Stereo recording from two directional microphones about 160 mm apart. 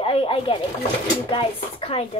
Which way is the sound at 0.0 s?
35° left (ahead or behind).